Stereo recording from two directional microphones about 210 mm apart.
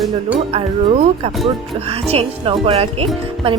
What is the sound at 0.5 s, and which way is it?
Speech, 30° right (ahead or behind).